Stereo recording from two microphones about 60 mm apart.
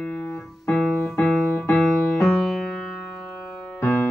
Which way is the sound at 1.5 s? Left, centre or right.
Left.